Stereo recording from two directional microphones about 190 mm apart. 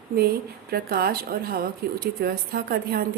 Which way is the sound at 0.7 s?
55° right (ahead or behind).